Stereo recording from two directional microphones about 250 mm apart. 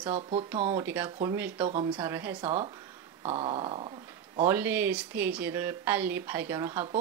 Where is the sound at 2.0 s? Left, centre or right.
Centre.